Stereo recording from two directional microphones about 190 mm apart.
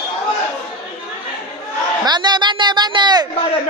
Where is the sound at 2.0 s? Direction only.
20° right (ahead or behind).